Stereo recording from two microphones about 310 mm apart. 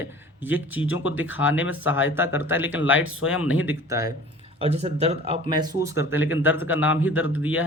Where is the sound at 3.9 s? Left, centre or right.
Centre.